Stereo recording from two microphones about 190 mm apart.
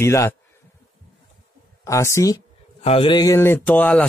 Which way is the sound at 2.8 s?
30° left (ahead or behind).